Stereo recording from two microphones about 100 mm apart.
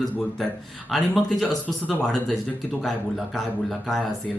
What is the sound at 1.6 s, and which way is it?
Speech, 15° left (ahead or behind).